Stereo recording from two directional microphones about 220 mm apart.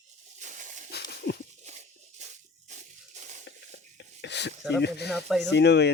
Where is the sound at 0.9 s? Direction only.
50° left (ahead or behind).